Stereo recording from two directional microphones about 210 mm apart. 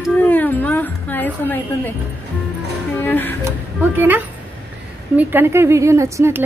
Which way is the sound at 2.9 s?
10° left (ahead or behind).